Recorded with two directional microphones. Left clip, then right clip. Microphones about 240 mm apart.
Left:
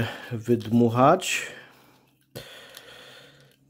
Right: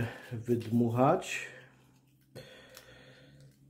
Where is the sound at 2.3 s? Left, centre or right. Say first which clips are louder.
Left 8 dB; left.